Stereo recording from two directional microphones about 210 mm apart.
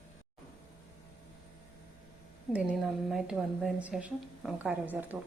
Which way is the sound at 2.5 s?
5° right (ahead or behind).